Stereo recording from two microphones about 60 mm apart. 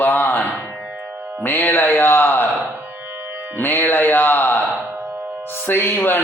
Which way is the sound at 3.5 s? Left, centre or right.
Left.